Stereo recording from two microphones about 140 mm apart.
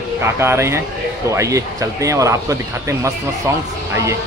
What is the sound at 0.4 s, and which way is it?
Speech, 20° right (ahead or behind).